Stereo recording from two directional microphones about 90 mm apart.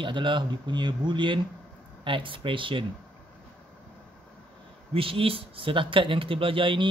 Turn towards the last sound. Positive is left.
turn(degrees=-70)  # may be behind; listen again after turning